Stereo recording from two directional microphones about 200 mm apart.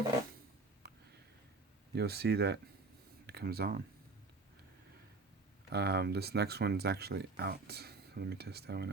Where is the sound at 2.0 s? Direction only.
55° right (ahead or behind).